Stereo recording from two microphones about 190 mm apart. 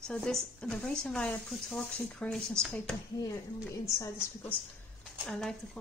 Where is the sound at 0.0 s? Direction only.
5° left (ahead or behind).